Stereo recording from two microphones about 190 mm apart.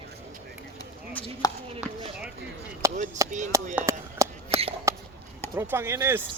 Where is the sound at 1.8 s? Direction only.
5° right (ahead or behind).